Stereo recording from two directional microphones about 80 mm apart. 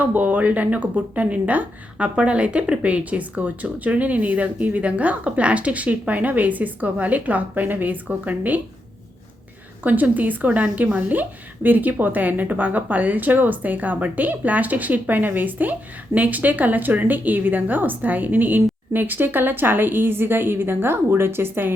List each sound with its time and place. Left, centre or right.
0.0 s a woman's voice: right
9.8 s a woman's voice: right